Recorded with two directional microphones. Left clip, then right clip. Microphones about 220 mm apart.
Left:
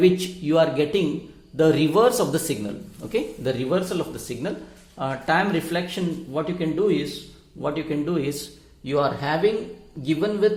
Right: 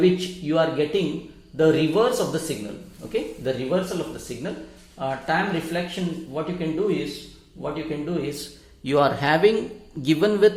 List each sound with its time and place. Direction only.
0.0 s speech: 25° left (ahead or behind)
8.8 s a man's voice: 5° right (ahead or behind)